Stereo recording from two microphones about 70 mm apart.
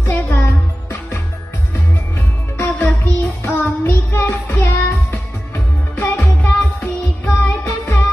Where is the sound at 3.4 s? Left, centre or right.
Left.